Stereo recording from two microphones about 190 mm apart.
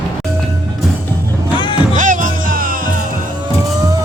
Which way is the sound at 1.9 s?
40° right (ahead or behind).